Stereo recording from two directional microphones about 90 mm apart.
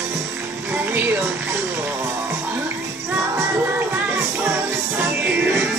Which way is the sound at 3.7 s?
20° right (ahead or behind).